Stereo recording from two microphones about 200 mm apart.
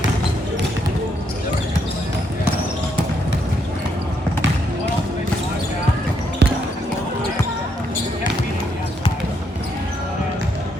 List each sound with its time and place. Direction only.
6.4 s basketball bounce: 60° right (ahead or behind)